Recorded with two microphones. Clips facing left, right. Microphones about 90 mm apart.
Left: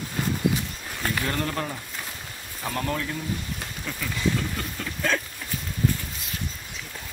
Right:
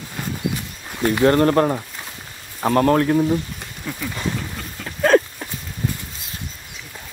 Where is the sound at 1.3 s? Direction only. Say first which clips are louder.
Right 13 dB; 50° right (ahead or behind).